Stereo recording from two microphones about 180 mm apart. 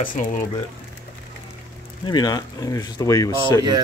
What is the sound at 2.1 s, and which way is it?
Speech, 20° left (ahead or behind).